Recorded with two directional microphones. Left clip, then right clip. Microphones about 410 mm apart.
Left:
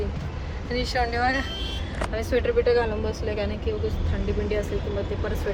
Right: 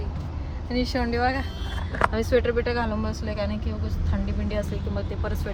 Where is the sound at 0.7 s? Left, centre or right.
Centre.